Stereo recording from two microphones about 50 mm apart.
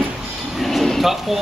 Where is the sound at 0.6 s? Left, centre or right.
Centre.